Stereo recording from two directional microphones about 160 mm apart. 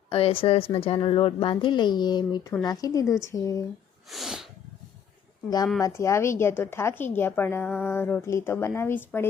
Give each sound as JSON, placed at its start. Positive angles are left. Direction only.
{"t": 0.1, "sound": "a woman's voice", "side_deg": 35}
{"t": 4.1, "sound": "sneeze", "side_deg": 0}
{"t": 5.8, "sound": "a woman's voice", "side_deg": 20}